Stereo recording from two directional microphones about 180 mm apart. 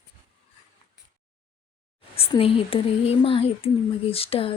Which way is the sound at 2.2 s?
30° left (ahead or behind).